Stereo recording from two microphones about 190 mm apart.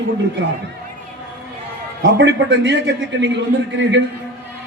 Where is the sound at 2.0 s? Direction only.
70° right (ahead or behind).